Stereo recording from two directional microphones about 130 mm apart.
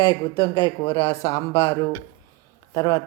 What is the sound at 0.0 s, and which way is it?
Speech, 35° left (ahead or behind).